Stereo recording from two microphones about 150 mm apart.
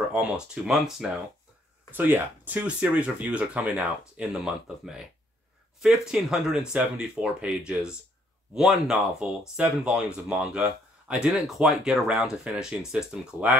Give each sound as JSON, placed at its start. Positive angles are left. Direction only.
{"t": 0.1, "sound": "speech", "side_deg": -5}
{"t": 1.9, "sound": "speech", "side_deg": -15}
{"t": 5.8, "sound": "speech", "side_deg": -5}